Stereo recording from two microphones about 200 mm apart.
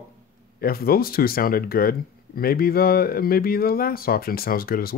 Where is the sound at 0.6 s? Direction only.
50° left (ahead or behind).